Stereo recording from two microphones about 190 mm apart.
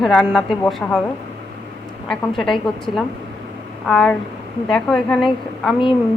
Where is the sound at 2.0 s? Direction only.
5° left (ahead or behind).